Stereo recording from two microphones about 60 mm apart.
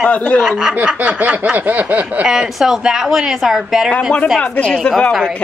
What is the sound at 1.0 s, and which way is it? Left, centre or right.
Speech, right.